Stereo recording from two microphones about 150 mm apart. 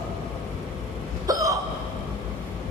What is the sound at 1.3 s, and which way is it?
Hiccup, 25° right (ahead or behind).